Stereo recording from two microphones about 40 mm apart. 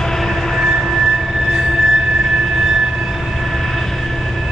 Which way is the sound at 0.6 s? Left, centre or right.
Centre.